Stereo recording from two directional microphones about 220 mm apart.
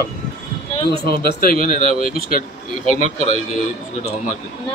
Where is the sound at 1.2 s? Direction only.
40° left (ahead or behind).